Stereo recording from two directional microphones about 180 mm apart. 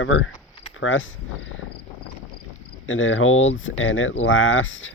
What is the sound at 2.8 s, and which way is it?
Speech, 90° left.